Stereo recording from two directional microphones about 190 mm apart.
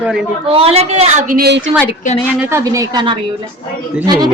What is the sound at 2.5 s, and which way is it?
Speech, 15° right (ahead or behind).